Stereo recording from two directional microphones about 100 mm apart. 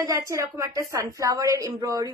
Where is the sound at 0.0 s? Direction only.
30° right (ahead or behind).